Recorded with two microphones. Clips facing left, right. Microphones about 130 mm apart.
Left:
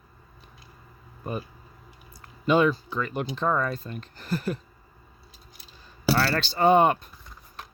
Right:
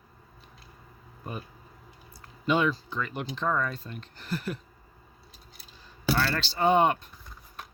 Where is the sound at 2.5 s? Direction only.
45° left (ahead or behind).